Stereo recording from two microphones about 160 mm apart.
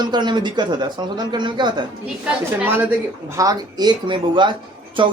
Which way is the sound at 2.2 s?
10° right (ahead or behind).